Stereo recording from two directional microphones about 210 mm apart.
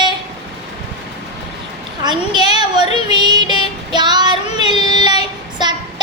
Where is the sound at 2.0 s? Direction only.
20° right (ahead or behind).